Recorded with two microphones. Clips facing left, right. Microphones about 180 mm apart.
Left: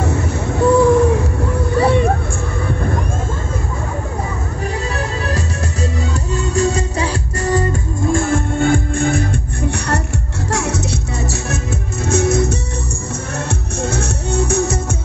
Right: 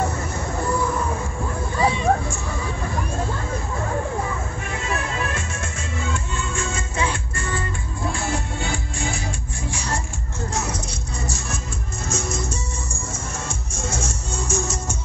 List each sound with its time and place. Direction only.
0.1 s vehicle: 70° left (ahead or behind)
1.8 s a sound: 65° left (ahead or behind)
4.9 s music: 35° left (ahead or behind)
8.1 s music: 50° left (ahead or behind)
10.5 s music: 75° left (ahead or behind)
12.1 s music: 65° left (ahead or behind)